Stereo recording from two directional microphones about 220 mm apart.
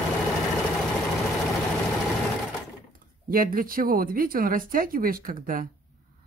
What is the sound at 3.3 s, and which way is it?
Speech, 40° right (ahead or behind).